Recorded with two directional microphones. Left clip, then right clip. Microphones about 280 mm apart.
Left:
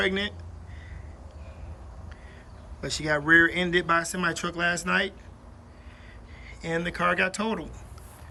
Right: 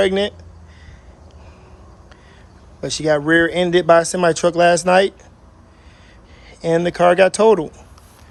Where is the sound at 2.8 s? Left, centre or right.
Centre.